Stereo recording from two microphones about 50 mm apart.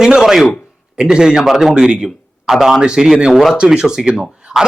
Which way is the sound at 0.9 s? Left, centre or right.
Centre.